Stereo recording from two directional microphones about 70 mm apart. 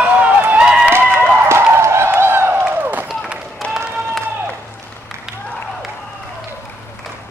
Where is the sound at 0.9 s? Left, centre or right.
Right.